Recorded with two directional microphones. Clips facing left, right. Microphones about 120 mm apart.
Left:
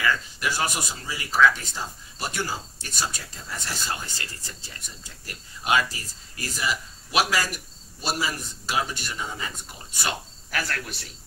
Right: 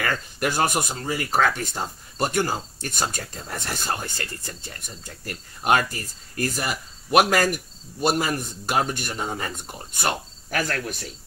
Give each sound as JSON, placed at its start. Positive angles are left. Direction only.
{"t": 0.0, "sound": "speech", "side_deg": -50}